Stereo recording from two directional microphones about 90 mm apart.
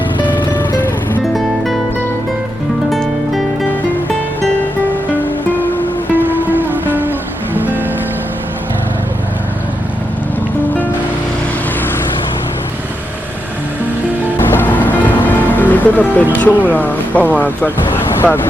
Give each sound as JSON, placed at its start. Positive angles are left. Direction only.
{"t": 1.3, "sound": "music", "side_deg": 0}
{"t": 2.9, "sound": "music", "side_deg": 0}
{"t": 6.1, "sound": "music", "side_deg": -20}
{"t": 14.3, "sound": "music", "side_deg": 25}
{"t": 16.3, "sound": "speech", "side_deg": 20}
{"t": 17.9, "sound": "vehicle", "side_deg": 25}